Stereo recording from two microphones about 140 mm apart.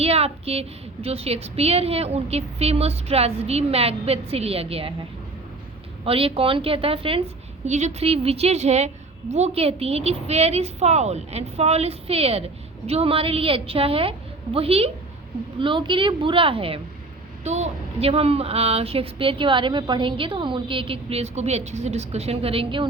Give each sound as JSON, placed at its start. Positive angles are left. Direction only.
{"t": 0.0, "sound": "speech", "side_deg": -45}
{"t": 6.1, "sound": "a woman's voice", "side_deg": -40}
{"t": 17.4, "sound": "speech", "side_deg": -50}